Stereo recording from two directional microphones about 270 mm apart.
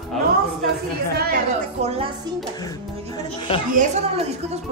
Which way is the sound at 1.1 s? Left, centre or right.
Right.